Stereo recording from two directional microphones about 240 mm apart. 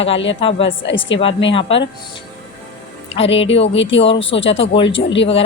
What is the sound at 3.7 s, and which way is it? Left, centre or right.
Speech, left.